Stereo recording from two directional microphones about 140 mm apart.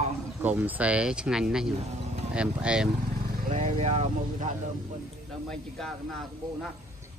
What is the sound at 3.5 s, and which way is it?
Speech, 55° right (ahead or behind).